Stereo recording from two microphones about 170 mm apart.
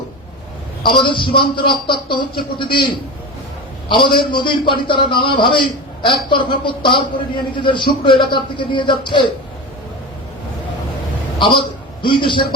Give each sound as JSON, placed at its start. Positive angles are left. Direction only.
{"t": 0.9, "sound": "a man's voice", "side_deg": 30}
{"t": 11.3, "sound": "a man's voice", "side_deg": 30}